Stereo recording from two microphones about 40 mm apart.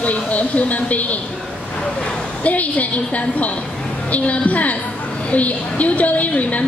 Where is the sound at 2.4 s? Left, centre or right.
Left.